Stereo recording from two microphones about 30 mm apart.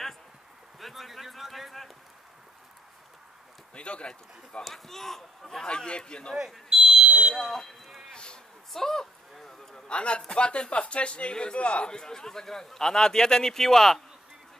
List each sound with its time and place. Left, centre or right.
0.7 s speech: centre
3.7 s speech: left
4.6 s speech: centre
5.7 s speech: left
6.7 s smoke detector: centre
7.3 s speech: centre
8.1 s speech: left
8.7 s a sound: centre
9.8 s speech: left
11.9 s a man's voice: left